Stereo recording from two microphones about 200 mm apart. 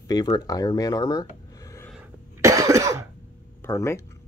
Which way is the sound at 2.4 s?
15° right (ahead or behind).